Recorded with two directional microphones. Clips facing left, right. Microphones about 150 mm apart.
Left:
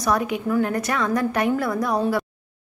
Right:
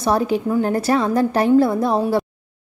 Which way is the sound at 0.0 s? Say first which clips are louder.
Right 4 dB; 30° right (ahead or behind).